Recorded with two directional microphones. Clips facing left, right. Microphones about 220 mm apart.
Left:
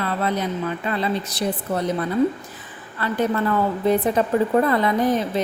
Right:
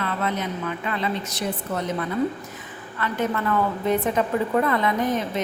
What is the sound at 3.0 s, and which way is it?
Speech, 35° left (ahead or behind).